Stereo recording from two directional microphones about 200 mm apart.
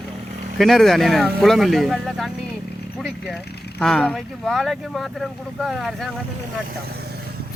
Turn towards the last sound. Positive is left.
turn(degrees=-50)  # may be behind; listen again after turning